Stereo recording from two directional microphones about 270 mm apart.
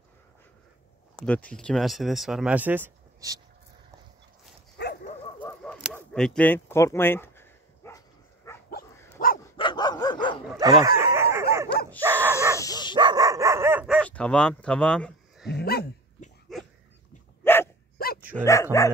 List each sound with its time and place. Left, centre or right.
1.1 s speech: centre
4.7 s dog: left
5.4 s a sound: centre
8.6 s dog: left
9.4 s dog: centre
10.6 s dog: centre
11.0 s chicken: centre
12.0 s dog: centre
12.5 s dog: centre
12.9 s dog: centre
15.5 s dog: left
16.5 s dog: centre
17.9 s dog: left
18.3 s dog: centre